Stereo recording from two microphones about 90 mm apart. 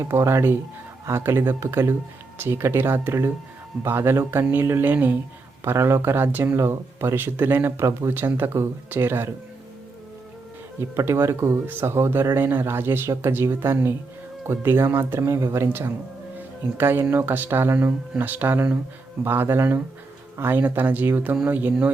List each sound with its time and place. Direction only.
0.0 s speech: 30° right (ahead or behind)
10.8 s speech: 30° right (ahead or behind)